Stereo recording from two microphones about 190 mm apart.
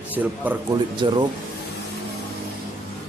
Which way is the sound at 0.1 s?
10° right (ahead or behind).